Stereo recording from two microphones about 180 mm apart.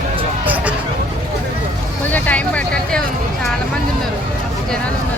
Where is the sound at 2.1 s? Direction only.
10° left (ahead or behind).